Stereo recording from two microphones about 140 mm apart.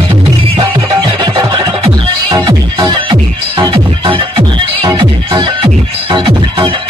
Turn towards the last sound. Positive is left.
turn(degrees=-40)  # may be behind; listen again after turning